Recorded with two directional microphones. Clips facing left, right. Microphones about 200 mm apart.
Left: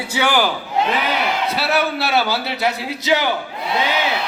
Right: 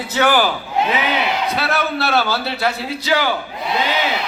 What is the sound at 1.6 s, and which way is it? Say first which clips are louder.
A man's voice: left 1 dB; 10° left (ahead or behind).